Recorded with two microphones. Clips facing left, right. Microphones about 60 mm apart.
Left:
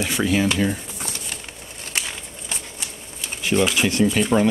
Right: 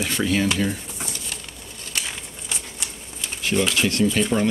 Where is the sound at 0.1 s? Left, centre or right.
Centre.